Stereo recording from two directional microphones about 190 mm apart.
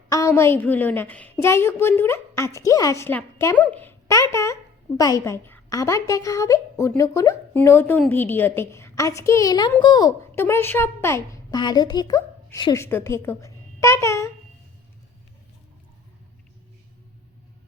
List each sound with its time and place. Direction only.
0.1 s a woman's voice: 15° left (ahead or behind)